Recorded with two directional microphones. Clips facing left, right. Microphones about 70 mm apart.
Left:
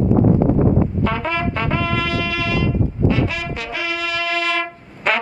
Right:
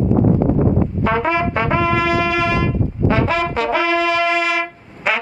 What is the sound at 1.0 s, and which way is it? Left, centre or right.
Brass instrument, centre.